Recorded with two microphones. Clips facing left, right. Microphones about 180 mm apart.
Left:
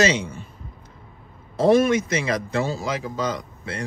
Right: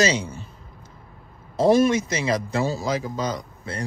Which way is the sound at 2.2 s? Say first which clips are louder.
Right 1 dB; 35° right (ahead or behind).